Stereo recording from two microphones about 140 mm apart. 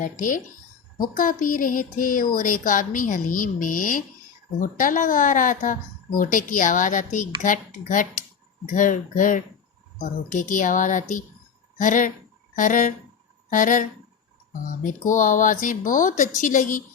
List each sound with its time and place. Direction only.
0.0 s speech: 70° left (ahead or behind)